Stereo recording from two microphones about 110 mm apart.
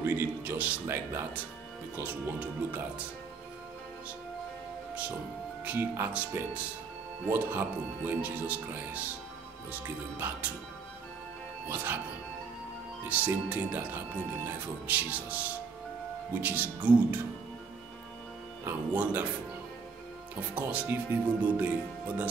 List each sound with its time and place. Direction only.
0.0 s speech: 15° right (ahead or behind)
5.7 s speech: 15° right (ahead or behind)
11.7 s speech: 15° right (ahead or behind)
13.1 s speech: 15° right (ahead or behind)
18.7 s speech: 15° right (ahead or behind)
20.3 s speech: 15° right (ahead or behind)